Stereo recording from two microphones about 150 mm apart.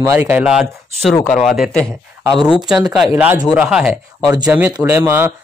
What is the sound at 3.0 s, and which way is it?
A man's voice, 10° right (ahead or behind).